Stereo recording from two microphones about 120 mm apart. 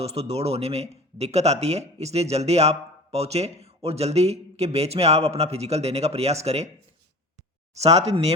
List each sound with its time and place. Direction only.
0.0 s speech: 60° right (ahead or behind)
7.8 s speech: 65° right (ahead or behind)